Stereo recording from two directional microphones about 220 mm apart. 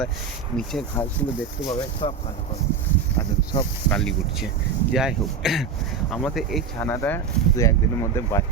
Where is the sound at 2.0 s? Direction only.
25° left (ahead or behind).